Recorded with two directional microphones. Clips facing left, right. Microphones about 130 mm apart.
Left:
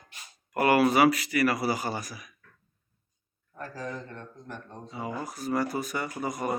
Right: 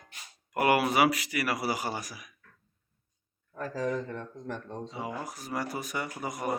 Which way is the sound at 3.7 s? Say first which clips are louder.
Right 7 dB; 90° right.